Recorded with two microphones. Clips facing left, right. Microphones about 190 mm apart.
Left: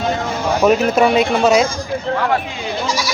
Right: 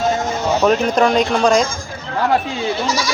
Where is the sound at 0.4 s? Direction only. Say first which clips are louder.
Left 2 dB; 10° left (ahead or behind).